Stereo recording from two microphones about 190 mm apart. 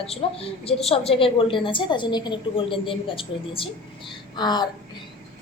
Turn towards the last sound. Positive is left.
turn(degrees=20)  # may be behind; listen again after turning